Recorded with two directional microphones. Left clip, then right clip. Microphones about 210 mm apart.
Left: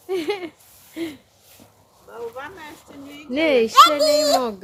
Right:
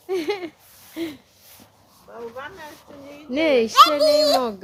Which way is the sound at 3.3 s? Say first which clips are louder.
Left 1 dB; 10° right (ahead or behind).